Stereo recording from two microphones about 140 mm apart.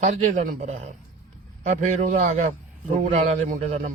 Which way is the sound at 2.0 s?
55° right (ahead or behind).